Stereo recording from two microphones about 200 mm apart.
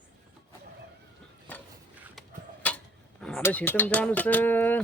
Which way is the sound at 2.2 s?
5° left (ahead or behind).